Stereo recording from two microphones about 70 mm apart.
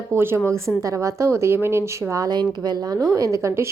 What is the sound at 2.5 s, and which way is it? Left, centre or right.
Speech, right.